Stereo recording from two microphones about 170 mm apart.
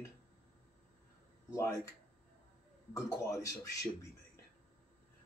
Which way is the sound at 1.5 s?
15° left (ahead or behind).